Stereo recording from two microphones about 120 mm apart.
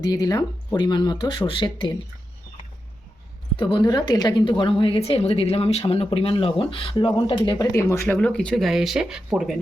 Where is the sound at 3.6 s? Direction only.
40° left (ahead or behind).